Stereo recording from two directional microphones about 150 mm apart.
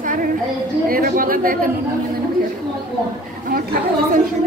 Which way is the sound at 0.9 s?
75° right (ahead or behind).